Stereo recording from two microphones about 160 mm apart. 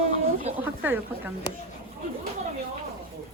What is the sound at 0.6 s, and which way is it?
Speech, 10° right (ahead or behind).